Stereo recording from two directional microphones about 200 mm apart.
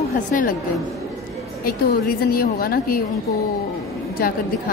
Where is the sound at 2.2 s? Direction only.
50° left (ahead or behind).